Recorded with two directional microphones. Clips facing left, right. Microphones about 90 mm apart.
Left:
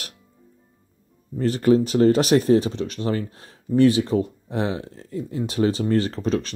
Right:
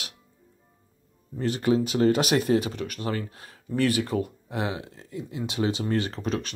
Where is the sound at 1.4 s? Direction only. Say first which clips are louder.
Left 6 dB; 40° left (ahead or behind).